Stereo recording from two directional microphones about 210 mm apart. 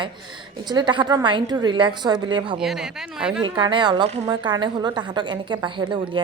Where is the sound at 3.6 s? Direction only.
20° right (ahead or behind).